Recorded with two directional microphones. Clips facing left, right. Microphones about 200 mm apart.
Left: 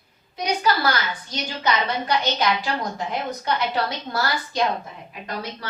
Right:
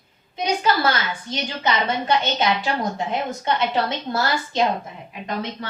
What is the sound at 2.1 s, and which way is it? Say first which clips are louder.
A woman's voice: right 1 dB; 25° right (ahead or behind).